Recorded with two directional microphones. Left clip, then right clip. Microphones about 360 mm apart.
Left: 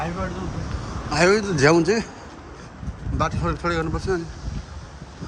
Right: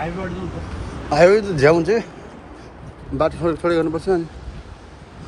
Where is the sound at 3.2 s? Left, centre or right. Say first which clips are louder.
Right 5 dB; centre.